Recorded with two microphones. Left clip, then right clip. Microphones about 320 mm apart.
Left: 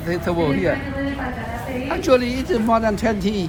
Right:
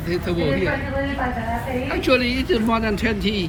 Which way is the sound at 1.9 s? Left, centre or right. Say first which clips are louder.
Left 2 dB; centre.